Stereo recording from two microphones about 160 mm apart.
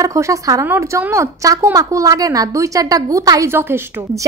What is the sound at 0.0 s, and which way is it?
A woman's voice, 20° right (ahead or behind).